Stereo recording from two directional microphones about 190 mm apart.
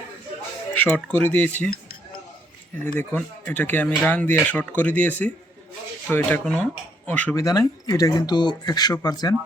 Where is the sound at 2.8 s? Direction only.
5° left (ahead or behind).